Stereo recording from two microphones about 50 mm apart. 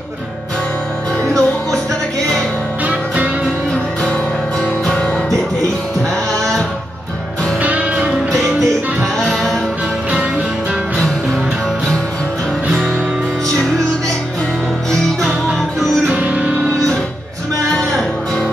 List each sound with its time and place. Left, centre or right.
1.2 s music: right
7.6 s music: right
9.2 s music: centre
16.2 s music: right